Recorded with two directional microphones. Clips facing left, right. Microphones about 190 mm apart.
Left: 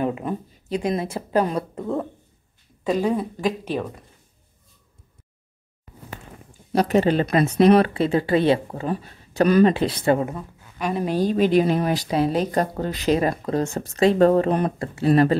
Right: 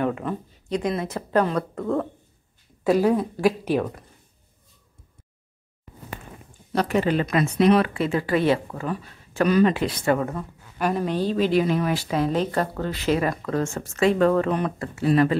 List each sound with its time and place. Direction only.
0.1 s a woman's voice: 15° left (ahead or behind)
2.8 s speech: 10° right (ahead or behind)
6.9 s speech: 30° left (ahead or behind)
11.0 s a woman's voice: 10° left (ahead or behind)
11.8 s speech: 35° left (ahead or behind)
12.2 s a woman's voice: 10° left (ahead or behind)
13.2 s speech: 30° left (ahead or behind)